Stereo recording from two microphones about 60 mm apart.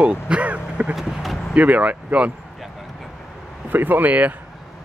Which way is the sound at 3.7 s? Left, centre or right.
Right.